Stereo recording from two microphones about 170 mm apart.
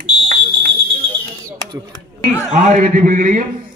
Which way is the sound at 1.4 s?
20° right (ahead or behind).